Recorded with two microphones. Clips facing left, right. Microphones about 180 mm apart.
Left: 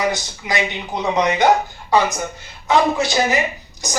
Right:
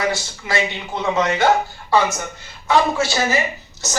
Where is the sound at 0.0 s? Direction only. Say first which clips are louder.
Left 1 dB; 20° left (ahead or behind).